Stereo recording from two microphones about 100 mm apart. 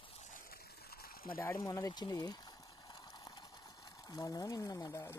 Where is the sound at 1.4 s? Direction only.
25° left (ahead or behind).